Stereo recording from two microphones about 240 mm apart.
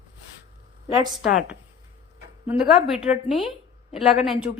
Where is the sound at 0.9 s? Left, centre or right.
Centre.